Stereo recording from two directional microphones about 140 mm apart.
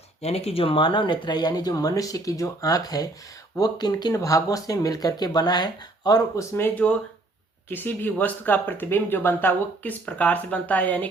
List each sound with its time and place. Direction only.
0.2 s speech: 50° left (ahead or behind); by 11.1 s 10° left (ahead or behind)